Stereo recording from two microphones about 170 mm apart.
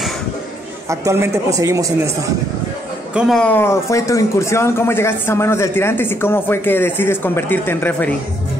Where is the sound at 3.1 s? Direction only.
5° left (ahead or behind).